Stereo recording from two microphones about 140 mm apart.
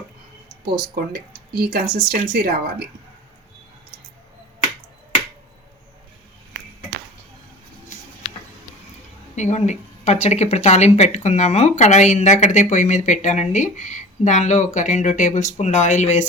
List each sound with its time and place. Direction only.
1.1 s speech: 90° right
9.3 s speech: 55° left (ahead or behind)